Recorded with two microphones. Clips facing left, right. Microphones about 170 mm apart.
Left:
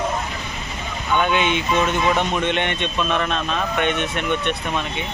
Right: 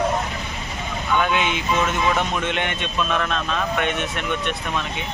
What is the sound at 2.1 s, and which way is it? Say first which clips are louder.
Speech: left 2 dB; 10° left (ahead or behind).